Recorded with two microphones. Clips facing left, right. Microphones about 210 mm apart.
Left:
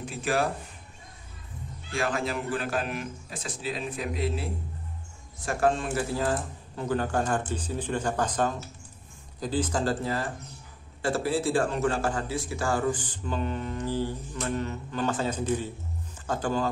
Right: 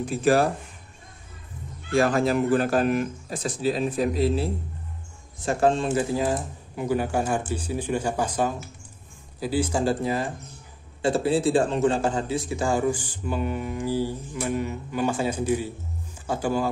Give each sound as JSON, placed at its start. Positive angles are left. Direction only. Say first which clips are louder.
{"t": 0.1, "sound": "speech", "louder": "right 7 dB", "side_deg": -40}
{"t": 1.9, "sound": "speech", "louder": "right 8 dB", "side_deg": -40}
{"t": 5.4, "sound": "a man's voice", "louder": "right 4 dB", "side_deg": -25}